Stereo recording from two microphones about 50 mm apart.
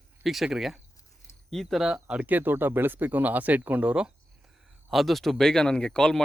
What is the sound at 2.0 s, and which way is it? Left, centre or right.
Speech, right.